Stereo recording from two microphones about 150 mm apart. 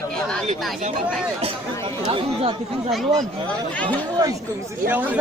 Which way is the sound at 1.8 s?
20° left (ahead or behind).